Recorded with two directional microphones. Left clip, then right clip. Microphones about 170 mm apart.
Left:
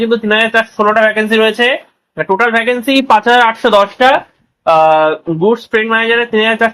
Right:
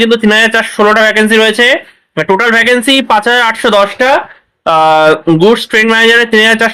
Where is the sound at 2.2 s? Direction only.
40° right (ahead or behind).